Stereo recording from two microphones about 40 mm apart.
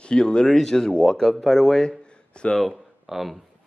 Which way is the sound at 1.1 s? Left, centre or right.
Centre.